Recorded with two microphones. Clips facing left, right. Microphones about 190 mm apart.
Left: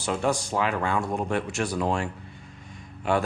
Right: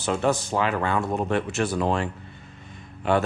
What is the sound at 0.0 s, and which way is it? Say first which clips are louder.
Speech: right 2 dB; 5° right (ahead or behind).